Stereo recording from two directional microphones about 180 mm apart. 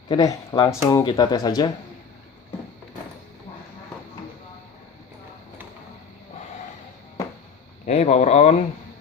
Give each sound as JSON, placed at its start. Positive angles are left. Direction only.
{"t": 0.1, "sound": "speech", "side_deg": 20}
{"t": 7.9, "sound": "speech", "side_deg": 40}